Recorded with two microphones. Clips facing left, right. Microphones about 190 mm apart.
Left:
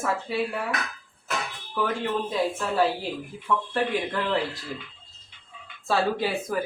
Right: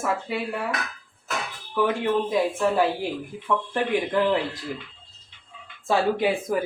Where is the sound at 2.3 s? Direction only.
15° right (ahead or behind).